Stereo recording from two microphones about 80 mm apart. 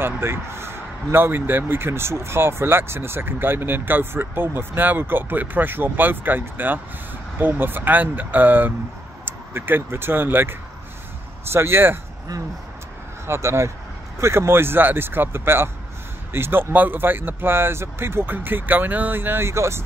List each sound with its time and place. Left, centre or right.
0.0 s speech: right
11.5 s speech: right
13.3 s speech: right